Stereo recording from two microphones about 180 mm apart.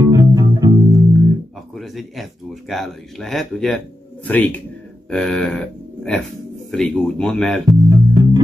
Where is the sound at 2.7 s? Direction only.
Centre (ahead or behind).